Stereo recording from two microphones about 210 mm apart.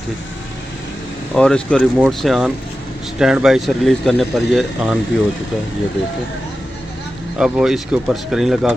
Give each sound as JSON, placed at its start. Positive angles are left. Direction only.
{"t": 1.3, "sound": "a man's voice", "side_deg": 5}
{"t": 7.3, "sound": "a man's voice", "side_deg": -5}